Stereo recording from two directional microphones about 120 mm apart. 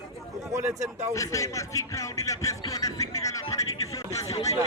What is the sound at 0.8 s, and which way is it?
Speech, 75° right (ahead or behind).